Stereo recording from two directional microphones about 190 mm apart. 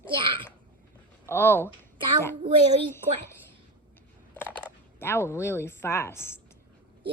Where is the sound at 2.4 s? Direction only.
30° right (ahead or behind).